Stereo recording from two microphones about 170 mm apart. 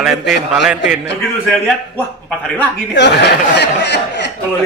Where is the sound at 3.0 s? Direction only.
85° left.